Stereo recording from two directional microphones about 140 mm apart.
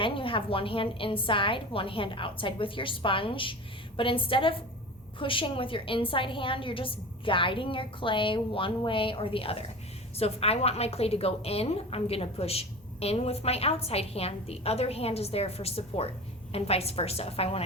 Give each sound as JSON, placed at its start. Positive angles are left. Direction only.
{"t": 0.0, "sound": "a woman's voice", "side_deg": 40}